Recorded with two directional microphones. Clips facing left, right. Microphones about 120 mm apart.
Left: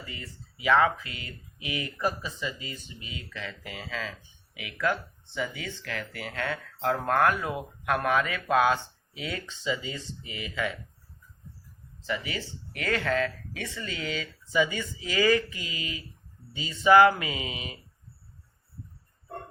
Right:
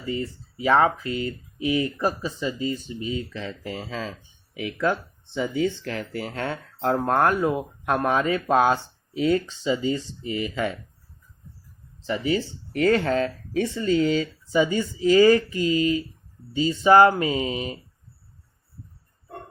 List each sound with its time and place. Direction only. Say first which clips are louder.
0.0 s speech: right 14 dB; 30° right (ahead or behind)
12.0 s speech: right 9 dB; 30° right (ahead or behind)